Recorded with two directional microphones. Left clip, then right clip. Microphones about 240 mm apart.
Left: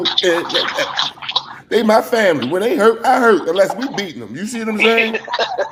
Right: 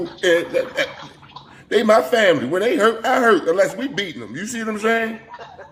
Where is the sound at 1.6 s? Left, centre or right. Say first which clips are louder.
Left 1 dB; centre.